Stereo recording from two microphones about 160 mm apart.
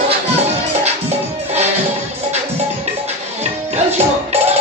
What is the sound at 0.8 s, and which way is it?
Music, 40° right (ahead or behind).